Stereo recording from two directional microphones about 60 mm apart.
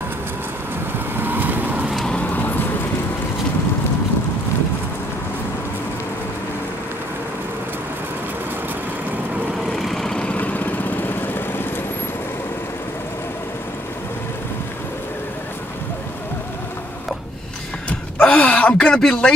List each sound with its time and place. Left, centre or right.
1.2 s vehicle: right
9.7 s vehicle: centre
10.3 s vehicle: left
18.2 s a sound: centre